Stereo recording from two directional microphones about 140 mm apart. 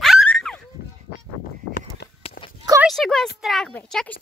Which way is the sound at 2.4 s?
90° left.